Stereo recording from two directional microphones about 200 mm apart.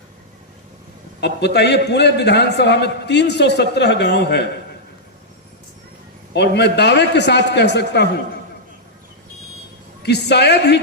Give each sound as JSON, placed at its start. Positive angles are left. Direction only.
{"t": 1.2, "sound": "a man's voice", "side_deg": 60}
{"t": 6.3, "sound": "a man's voice", "side_deg": 55}
{"t": 10.0, "sound": "a man's voice", "side_deg": 55}